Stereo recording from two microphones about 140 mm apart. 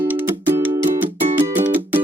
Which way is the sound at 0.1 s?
15° right (ahead or behind).